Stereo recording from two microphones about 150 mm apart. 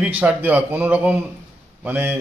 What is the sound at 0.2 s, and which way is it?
Speech, 10° right (ahead or behind).